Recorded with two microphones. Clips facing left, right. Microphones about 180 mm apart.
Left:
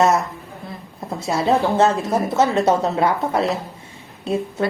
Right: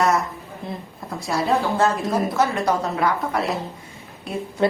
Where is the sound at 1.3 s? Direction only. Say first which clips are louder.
Left 3 dB; 25° left (ahead or behind).